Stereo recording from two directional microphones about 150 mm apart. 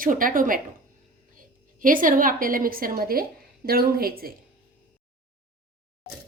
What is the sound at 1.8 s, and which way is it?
A woman's voice, 65° right (ahead or behind).